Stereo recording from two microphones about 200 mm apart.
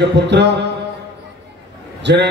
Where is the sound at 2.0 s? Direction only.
60° right (ahead or behind).